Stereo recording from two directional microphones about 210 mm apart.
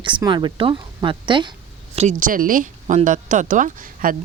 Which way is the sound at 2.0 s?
35° right (ahead or behind).